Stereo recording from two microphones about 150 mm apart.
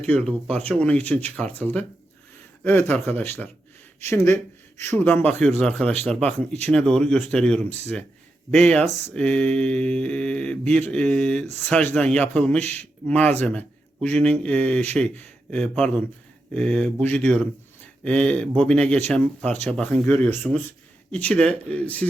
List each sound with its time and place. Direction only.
0.0 s speech: 5° left (ahead or behind)